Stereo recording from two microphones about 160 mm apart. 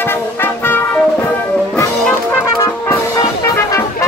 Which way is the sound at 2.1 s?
10° left (ahead or behind).